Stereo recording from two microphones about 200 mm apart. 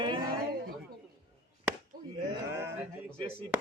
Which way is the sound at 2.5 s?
10° right (ahead or behind).